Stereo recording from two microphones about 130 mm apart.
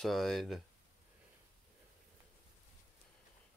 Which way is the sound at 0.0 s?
Centre (ahead or behind).